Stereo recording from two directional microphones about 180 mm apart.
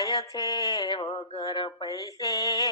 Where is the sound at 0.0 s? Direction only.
20° left (ahead or behind).